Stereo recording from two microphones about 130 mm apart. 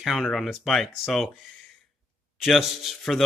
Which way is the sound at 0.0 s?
Centre (ahead or behind).